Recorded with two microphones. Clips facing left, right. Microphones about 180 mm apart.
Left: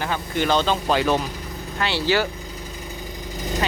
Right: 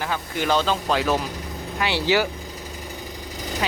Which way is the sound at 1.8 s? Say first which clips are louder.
Even; 15° right (ahead or behind).